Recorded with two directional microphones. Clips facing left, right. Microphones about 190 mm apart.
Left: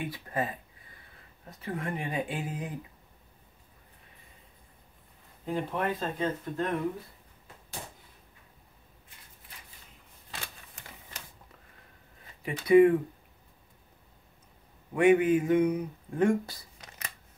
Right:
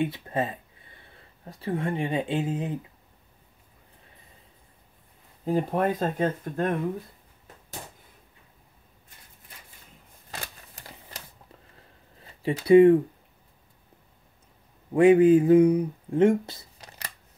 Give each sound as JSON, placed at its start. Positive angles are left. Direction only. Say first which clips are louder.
{"t": 0.0, "sound": "speech", "louder": "right 5 dB", "side_deg": -25}
{"t": 5.4, "sound": "speech", "louder": "right 6 dB", "side_deg": -40}
{"t": 10.3, "sound": "typewriter", "louder": "right 4 dB", "side_deg": -40}
{"t": 12.4, "sound": "speech", "louder": "right 4 dB", "side_deg": -30}
{"t": 15.0, "sound": "speech", "louder": "right 6 dB", "side_deg": -30}